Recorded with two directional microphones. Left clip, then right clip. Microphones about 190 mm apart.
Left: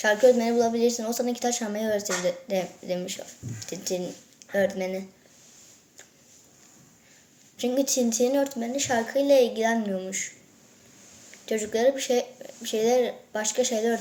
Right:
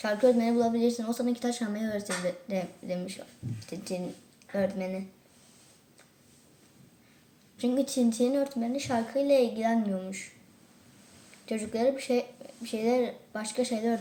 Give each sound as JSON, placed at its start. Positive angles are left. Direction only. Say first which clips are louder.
{"t": 0.0, "sound": "a woman's voice", "louder": "left 5 dB", "side_deg": -10}
{"t": 7.5, "sound": "a woman's voice", "louder": "left 4 dB", "side_deg": -10}
{"t": 11.4, "sound": "a woman's voice", "louder": "left 5 dB", "side_deg": -5}